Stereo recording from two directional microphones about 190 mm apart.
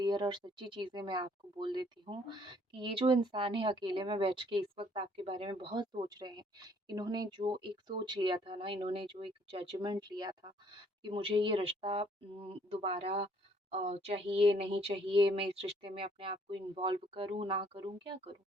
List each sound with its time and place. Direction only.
0.0 s speech: 20° right (ahead or behind)